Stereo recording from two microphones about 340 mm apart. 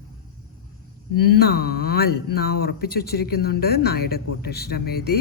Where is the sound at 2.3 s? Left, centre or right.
Left.